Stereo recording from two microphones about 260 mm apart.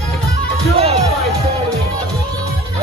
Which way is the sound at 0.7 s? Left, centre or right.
Right.